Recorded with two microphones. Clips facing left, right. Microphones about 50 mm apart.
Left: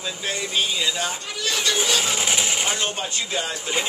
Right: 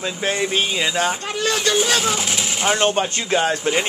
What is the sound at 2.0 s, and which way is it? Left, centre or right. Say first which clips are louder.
Speech: right 2 dB; centre.